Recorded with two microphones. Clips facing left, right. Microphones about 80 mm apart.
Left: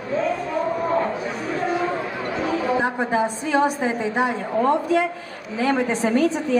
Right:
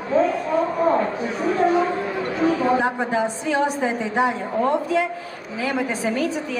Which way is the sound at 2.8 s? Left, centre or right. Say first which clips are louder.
Even; left.